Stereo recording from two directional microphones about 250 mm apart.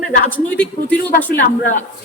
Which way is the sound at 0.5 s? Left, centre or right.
Centre.